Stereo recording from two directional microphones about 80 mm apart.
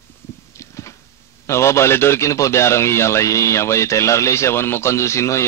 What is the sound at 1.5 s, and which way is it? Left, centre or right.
Speech, left.